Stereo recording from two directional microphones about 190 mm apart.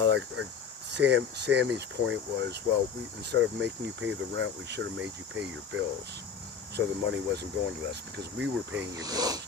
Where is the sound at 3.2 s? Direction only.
65° right (ahead or behind).